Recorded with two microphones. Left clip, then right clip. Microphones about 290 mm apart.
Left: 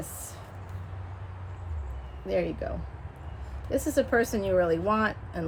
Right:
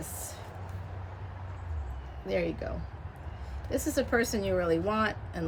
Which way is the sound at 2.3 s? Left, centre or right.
Centre.